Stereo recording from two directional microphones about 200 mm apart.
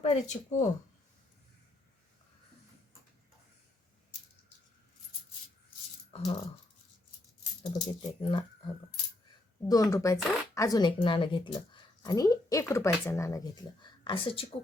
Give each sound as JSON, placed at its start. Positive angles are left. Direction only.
{"t": 0.0, "sound": "speech", "side_deg": 35}
{"t": 6.1, "sound": "coin", "side_deg": 30}
{"t": 7.6, "sound": "speech", "side_deg": 25}